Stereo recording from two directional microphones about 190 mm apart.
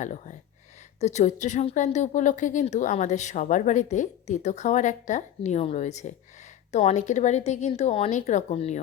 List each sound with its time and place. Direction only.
0.0 s speech: 40° left (ahead or behind)